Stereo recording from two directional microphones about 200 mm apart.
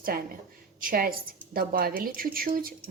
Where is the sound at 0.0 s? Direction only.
45° right (ahead or behind).